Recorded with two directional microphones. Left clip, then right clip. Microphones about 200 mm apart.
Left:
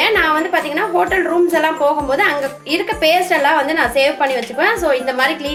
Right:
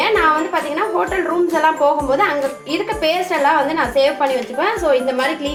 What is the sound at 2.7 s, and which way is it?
A woman's voice, 5° left (ahead or behind).